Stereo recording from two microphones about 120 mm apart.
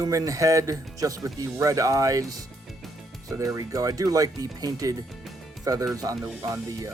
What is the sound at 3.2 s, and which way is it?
Speech, 25° right (ahead or behind).